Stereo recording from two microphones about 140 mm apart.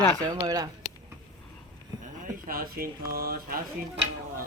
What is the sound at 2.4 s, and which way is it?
Speech, 90° right.